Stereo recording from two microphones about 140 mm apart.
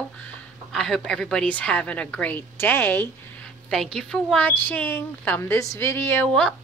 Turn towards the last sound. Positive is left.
turn(degrees=15)  # may be behind; listen again after turning